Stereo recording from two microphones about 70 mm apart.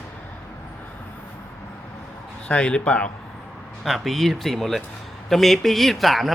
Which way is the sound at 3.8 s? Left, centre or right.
Centre.